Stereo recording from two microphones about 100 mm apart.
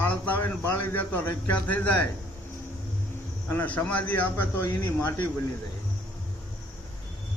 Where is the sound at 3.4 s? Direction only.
20° left (ahead or behind).